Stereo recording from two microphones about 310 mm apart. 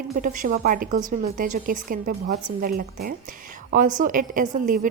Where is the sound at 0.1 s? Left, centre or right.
Right.